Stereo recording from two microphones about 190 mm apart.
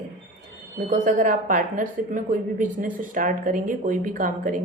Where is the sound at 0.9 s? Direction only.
45° right (ahead or behind).